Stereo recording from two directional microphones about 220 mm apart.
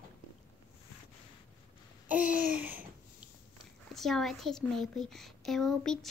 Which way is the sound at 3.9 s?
Centre (ahead or behind).